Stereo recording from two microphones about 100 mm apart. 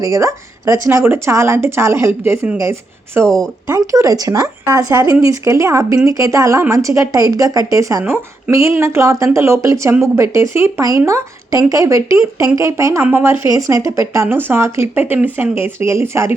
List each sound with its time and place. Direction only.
0.0 s speech: 35° right (ahead or behind)
3.2 s speech: 5° left (ahead or behind)
3.7 s speech: 30° right (ahead or behind)
13.5 s speech: 35° right (ahead or behind)